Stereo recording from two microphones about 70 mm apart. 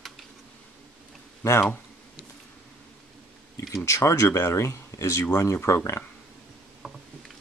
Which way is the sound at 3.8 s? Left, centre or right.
Left.